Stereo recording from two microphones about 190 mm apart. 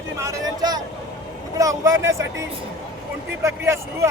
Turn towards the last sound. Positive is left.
turn(degrees=-15)  # may be behind; listen again after turning